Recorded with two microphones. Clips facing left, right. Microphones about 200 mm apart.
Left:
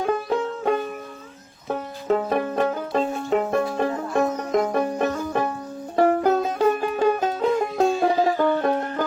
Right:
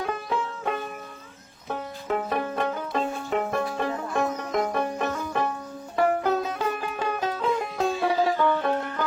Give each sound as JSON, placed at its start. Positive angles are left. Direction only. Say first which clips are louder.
{"t": 0.0, "sound": "music", "louder": "left 6 dB", "side_deg": 40}